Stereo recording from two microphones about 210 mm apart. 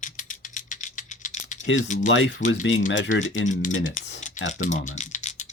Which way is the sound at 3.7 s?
65° left (ahead or behind).